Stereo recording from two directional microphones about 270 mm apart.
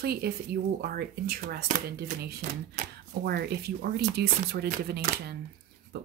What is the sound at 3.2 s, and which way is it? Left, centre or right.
Speech, right.